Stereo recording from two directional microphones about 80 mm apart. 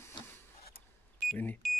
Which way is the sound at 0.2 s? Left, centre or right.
Left.